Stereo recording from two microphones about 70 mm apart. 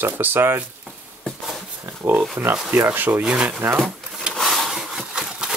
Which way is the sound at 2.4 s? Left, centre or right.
Right.